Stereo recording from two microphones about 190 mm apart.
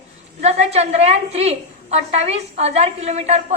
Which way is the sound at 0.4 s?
35° right (ahead or behind).